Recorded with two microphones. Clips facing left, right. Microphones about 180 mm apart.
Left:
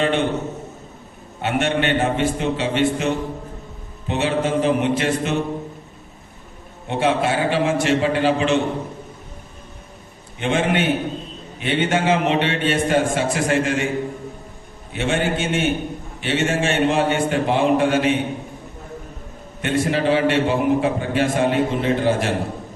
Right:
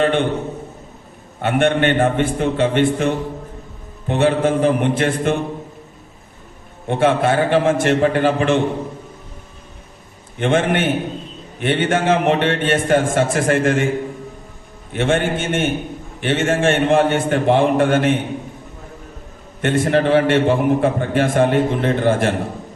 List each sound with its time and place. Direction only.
0.0 s a sound: 50° right (ahead or behind)
1.4 s a man's voice: 55° right (ahead or behind)
6.8 s a man's voice: 50° right (ahead or behind)
10.3 s a man's voice: 50° right (ahead or behind)
14.9 s a man's voice: 50° right (ahead or behind)
19.6 s a man's voice: 50° right (ahead or behind)